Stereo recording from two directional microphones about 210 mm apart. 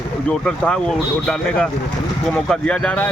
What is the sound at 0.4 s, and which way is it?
Speech, 5° left (ahead or behind).